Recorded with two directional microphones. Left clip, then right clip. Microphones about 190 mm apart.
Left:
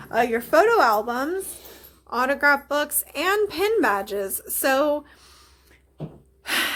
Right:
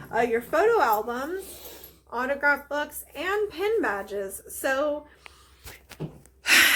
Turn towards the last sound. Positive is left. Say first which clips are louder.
# right 6 dB
turn(degrees=0)  # may be behind; listen again after turning